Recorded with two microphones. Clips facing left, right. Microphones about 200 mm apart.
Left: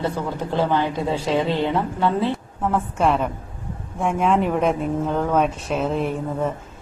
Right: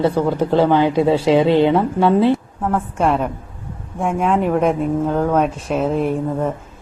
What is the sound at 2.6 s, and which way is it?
A woman's voice, centre (ahead or behind).